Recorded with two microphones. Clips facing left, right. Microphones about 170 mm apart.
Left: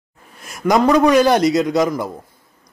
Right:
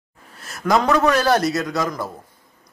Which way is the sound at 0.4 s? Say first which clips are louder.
Left 3 dB; 15° left (ahead or behind).